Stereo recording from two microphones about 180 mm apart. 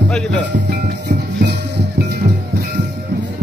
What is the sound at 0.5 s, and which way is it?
Music, 70° right (ahead or behind).